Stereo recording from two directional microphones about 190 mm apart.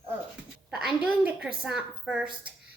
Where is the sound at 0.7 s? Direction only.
5° right (ahead or behind).